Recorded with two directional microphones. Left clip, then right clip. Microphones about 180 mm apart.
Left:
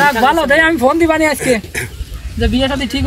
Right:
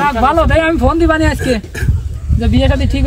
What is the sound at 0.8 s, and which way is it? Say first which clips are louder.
Speech: left 1 dB; 40° right (ahead or behind).